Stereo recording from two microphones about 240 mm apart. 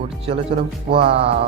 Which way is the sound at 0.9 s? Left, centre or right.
Right.